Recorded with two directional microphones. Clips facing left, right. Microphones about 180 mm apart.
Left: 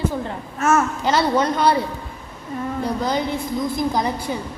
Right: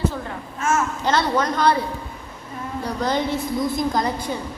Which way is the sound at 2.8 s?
Centre (ahead or behind).